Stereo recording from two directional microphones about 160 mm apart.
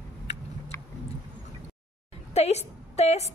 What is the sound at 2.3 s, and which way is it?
Speech, 40° left (ahead or behind).